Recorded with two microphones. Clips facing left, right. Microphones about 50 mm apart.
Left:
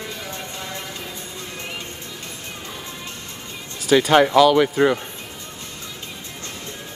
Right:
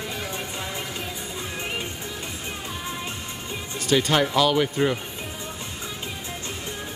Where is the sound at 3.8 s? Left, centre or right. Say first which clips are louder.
Left 6 dB; centre.